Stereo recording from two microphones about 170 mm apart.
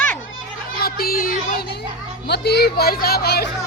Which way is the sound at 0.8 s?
60° left (ahead or behind).